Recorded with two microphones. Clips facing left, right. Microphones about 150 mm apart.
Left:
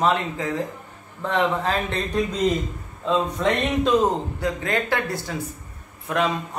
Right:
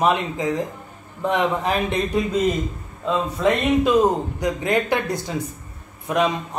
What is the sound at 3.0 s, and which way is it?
A man's voice, 10° right (ahead or behind).